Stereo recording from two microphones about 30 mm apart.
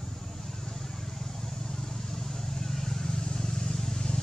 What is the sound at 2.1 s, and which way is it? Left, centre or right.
Vehicle, centre.